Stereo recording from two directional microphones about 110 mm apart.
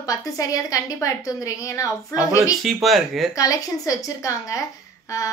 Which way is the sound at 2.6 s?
Centre (ahead or behind).